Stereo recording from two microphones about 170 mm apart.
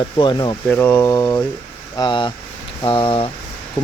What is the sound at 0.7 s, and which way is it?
Speech, 10° left (ahead or behind).